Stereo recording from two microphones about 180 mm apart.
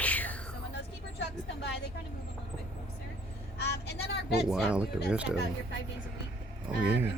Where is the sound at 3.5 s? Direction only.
70° left (ahead or behind).